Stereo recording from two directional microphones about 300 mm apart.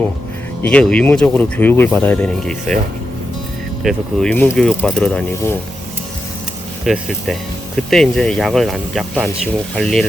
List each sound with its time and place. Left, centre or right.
0.6 s speech: centre
3.8 s speech: centre
6.8 s speech: centre